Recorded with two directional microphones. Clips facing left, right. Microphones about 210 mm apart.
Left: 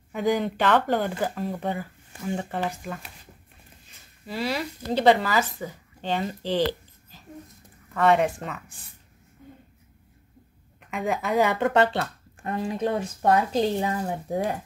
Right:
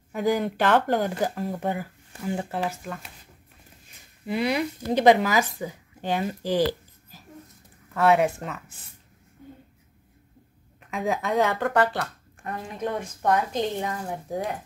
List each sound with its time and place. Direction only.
0.1 s speech: 10° right (ahead or behind)
4.3 s speech: 20° right (ahead or behind)
10.8 s a woman's voice: centre (ahead or behind)
11.6 s speech: 25° left (ahead or behind)